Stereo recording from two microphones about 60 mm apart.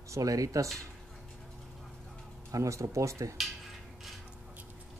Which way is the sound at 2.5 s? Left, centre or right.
Right.